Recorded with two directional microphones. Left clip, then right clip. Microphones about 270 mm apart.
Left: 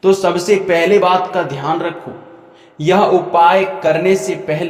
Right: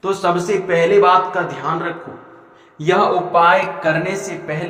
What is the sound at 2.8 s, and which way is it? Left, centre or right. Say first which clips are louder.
Speech: left 3 dB; left.